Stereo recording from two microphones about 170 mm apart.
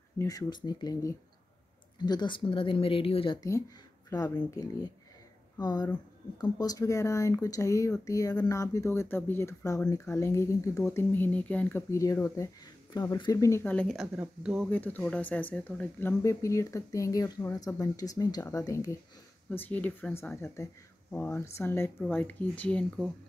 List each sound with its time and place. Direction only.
0.2 s speech: 20° left (ahead or behind)
4.1 s speech: 20° left (ahead or behind); by 14.0 s 5° left (ahead or behind)
14.1 s speech: 10° right (ahead or behind)
14.7 s speech: 10° left (ahead or behind)